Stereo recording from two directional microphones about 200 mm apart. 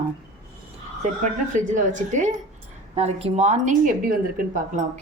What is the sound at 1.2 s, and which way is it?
A woman's voice, 40° right (ahead or behind).